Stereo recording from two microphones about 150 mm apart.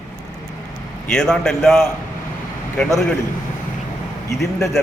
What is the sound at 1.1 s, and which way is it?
Speech, 5° left (ahead or behind).